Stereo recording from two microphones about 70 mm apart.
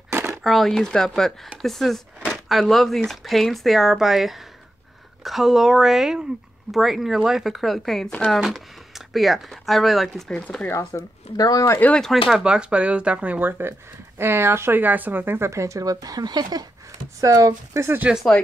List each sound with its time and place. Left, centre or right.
0.4 s speech: centre
2.3 s a sound: centre
2.6 s speech: centre
10.7 s speech: left
12.0 s speech: centre
12.4 s speech: centre; by 15.5 s right
15.5 s speech: right
17.2 s speech: right
18.1 s speech: centre